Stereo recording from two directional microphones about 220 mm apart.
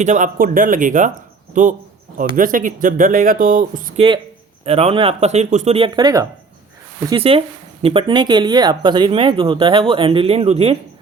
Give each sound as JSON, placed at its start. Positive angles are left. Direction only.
{"t": 0.0, "sound": "speech", "side_deg": -35}